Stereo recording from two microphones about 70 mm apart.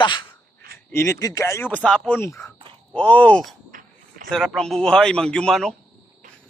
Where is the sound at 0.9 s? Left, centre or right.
Left.